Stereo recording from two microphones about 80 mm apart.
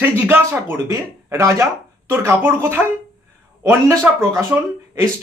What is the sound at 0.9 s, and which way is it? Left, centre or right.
Speech, right.